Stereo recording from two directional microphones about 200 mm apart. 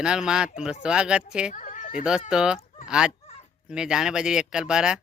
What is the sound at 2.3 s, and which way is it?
Speech, 5° right (ahead or behind).